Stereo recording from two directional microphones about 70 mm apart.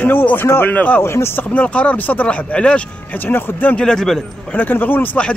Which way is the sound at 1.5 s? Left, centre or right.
Centre.